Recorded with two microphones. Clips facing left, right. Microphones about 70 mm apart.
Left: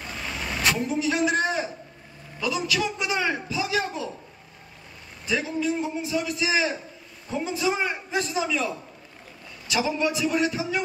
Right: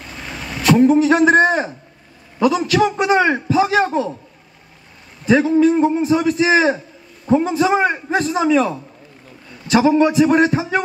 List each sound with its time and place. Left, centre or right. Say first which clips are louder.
0.7 s a man's voice: right 14 dB; right
5.2 s a man's voice: right 13 dB; right